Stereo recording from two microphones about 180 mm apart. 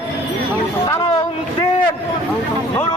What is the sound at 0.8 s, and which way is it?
Speech, 20° left (ahead or behind).